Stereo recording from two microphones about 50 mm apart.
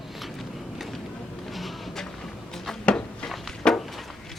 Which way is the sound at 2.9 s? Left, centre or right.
Left.